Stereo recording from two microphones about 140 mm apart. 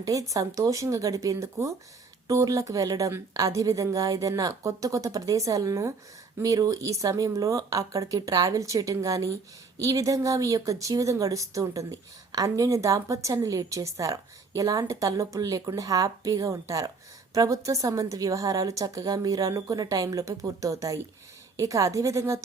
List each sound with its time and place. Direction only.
0.0 s speech: 25° right (ahead or behind)